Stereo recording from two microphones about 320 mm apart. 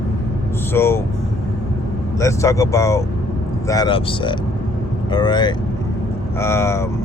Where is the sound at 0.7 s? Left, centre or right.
Centre.